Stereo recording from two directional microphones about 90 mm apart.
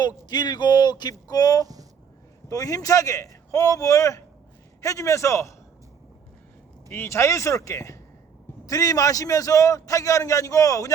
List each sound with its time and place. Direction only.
0.3 s a man's voice: 50° left (ahead or behind); by 5.5 s 35° left (ahead or behind)
6.9 s a man's voice: 30° left (ahead or behind)